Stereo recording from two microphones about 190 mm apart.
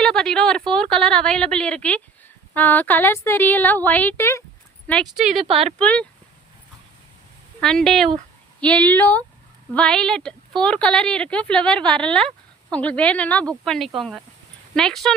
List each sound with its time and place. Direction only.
0.0 s a woman's voice: 5° left (ahead or behind)
5.5 s speech: 35° right (ahead or behind)
5.8 s speech: 5° left (ahead or behind)
7.6 s a woman's voice: 5° left (ahead or behind)